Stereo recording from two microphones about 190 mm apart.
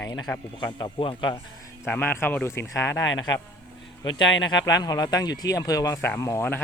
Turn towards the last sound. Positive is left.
turn(degrees=15)  # may be behind; listen again after turning